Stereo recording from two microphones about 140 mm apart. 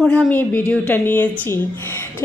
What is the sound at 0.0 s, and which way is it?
A woman's voice, 5° left (ahead or behind).